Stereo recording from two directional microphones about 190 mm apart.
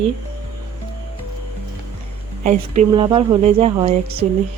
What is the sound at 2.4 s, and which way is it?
Speech, 40° right (ahead or behind).